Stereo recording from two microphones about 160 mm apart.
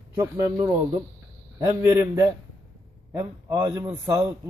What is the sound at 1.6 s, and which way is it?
A man's voice, 20° right (ahead or behind).